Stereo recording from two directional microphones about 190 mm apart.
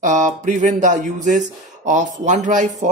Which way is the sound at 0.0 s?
40° right (ahead or behind).